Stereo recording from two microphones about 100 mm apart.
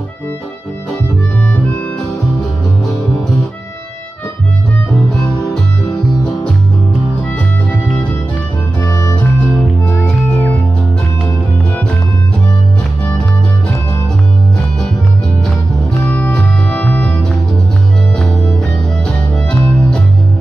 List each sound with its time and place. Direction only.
7.3 s music: 20° left (ahead or behind)
8.8 s music: 30° left (ahead or behind)
9.1 s music: 15° left (ahead or behind)
10.3 s music: 25° left (ahead or behind)
16.1 s music: 15° left (ahead or behind)